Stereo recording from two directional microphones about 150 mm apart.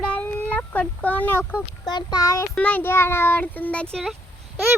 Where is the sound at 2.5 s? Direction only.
10° left (ahead or behind).